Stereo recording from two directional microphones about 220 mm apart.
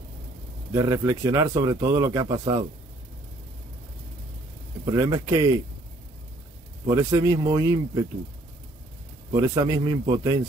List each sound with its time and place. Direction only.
0.7 s a man's voice: 15° right (ahead or behind)
4.9 s a man's voice: 15° right (ahead or behind)
6.9 s a man's voice: 15° right (ahead or behind)
9.3 s a man's voice: 15° right (ahead or behind)